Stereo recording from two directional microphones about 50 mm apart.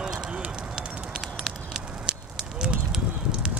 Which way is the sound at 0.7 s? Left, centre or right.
Centre.